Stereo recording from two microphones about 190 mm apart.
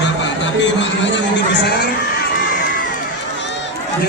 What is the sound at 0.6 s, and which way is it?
Speech, 70° left (ahead or behind).